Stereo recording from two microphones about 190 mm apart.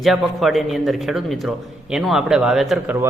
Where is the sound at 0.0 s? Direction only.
Centre (ahead or behind).